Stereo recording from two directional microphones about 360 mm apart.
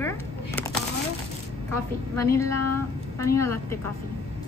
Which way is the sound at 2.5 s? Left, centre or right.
Left.